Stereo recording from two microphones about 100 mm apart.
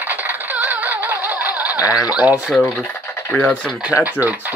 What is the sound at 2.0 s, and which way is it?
Speech, 15° right (ahead or behind).